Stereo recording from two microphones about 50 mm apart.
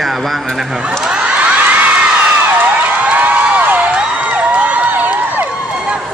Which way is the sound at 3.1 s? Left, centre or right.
Right.